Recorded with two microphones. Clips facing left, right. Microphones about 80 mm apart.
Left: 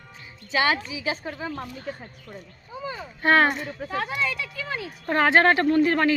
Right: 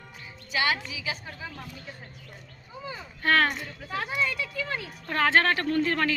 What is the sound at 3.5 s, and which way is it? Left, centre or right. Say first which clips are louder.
Speech: left 6 dB; left.